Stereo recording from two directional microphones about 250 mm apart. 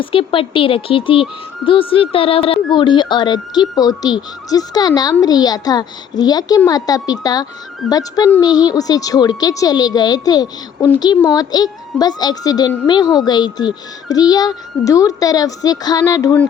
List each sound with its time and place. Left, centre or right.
0.0 s a child's voice: left